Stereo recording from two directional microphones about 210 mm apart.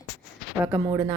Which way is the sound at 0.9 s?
20° right (ahead or behind).